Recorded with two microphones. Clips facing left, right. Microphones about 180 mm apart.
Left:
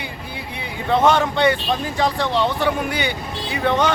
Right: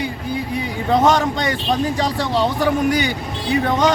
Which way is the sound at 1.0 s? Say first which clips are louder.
Left 1 dB; 40° right (ahead or behind).